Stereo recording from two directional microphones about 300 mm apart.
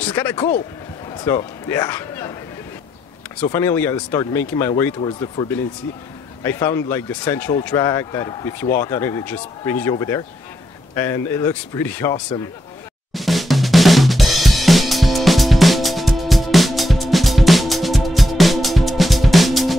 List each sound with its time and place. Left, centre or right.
0.0 s a man's voice: centre
3.3 s speech: centre
13.1 s drum kit: centre